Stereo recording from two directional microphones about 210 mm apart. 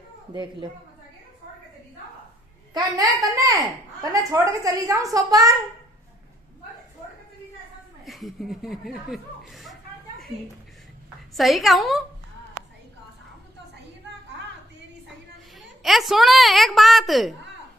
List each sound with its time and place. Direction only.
0.3 s a woman's voice: 20° right (ahead or behind)
3.0 s a woman's voice: 15° right (ahead or behind)
8.0 s chuckle: centre (ahead or behind)
11.3 s a woman's voice: centre (ahead or behind)
15.8 s a woman's voice: centre (ahead or behind)